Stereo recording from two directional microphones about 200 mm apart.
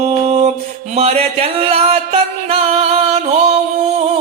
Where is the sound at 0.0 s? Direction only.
30° right (ahead or behind).